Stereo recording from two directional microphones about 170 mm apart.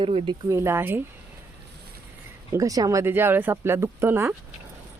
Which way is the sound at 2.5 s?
20° right (ahead or behind).